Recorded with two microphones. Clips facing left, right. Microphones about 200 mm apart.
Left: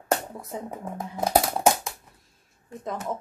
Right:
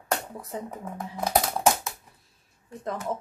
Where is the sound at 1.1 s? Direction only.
25° left (ahead or behind).